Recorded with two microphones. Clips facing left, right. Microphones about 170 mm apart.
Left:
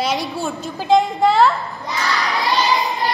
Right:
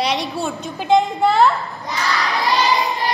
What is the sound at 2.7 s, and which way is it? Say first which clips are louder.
Child singing: even; centre (ahead or behind).